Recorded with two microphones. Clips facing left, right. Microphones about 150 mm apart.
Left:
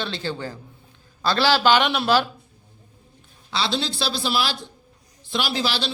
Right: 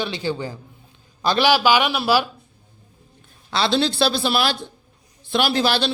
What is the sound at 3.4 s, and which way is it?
Speech, 55° right (ahead or behind).